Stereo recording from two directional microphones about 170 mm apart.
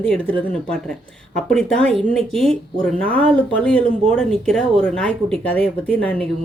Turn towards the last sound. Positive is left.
turn(degrees=10)  # may be behind; listen again after turning